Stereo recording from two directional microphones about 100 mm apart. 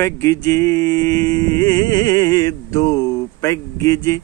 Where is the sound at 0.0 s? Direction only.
30° left (ahead or behind).